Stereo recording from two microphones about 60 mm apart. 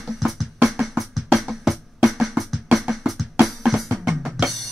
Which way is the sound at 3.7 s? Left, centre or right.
Centre.